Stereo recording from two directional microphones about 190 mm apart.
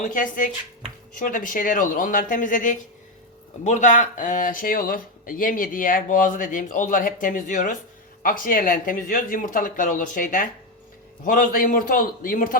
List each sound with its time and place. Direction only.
0.0 s speech: 45° left (ahead or behind)